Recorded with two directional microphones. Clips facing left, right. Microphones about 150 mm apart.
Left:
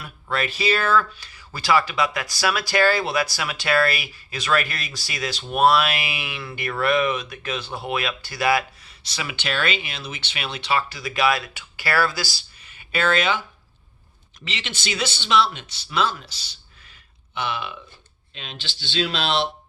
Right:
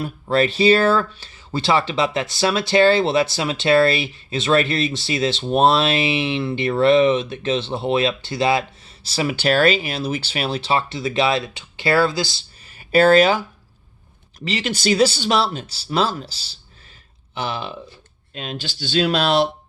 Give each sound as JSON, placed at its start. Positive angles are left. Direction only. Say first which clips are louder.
{"t": 0.0, "sound": "speech", "louder": "right 8 dB", "side_deg": -30}
{"t": 12.6, "sound": "a sound", "louder": "right 9 dB", "side_deg": -35}
{"t": 14.4, "sound": "speech", "louder": "right 11 dB", "side_deg": -40}